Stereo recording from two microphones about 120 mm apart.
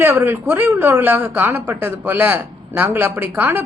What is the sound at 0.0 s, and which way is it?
A woman's voice, 20° right (ahead or behind).